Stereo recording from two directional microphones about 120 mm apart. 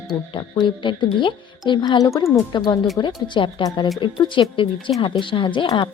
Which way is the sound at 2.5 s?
40° left (ahead or behind).